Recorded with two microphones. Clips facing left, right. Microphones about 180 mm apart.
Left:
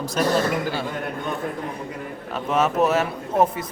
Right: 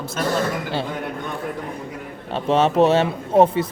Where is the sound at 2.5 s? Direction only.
30° right (ahead or behind).